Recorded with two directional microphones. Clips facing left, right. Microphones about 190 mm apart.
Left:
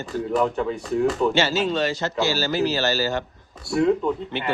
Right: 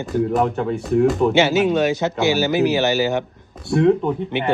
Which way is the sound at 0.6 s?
5° right (ahead or behind).